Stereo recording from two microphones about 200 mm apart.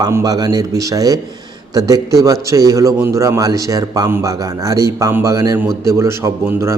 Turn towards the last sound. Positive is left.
turn(degrees=-15)  # may be behind; listen again after turning